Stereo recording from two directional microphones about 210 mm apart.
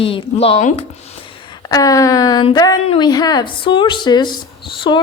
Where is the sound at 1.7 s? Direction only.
15° left (ahead or behind).